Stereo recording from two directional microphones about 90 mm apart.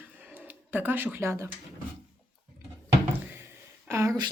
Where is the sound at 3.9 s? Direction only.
30° right (ahead or behind).